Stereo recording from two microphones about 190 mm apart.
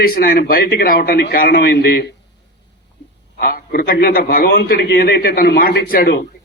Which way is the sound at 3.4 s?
50° left (ahead or behind).